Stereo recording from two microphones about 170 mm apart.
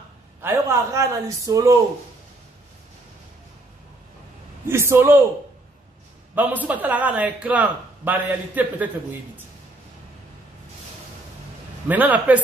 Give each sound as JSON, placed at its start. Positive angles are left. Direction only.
{"t": 0.4, "sound": "a man's voice", "side_deg": -15}
{"t": 4.6, "sound": "a man's voice", "side_deg": -15}
{"t": 6.3, "sound": "a man's voice", "side_deg": -10}
{"t": 11.9, "sound": "a man's voice", "side_deg": -10}